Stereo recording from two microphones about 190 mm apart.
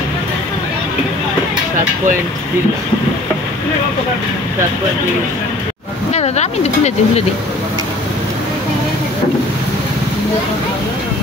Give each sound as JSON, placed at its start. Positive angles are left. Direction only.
{"t": 6.1, "sound": "speech", "side_deg": 35}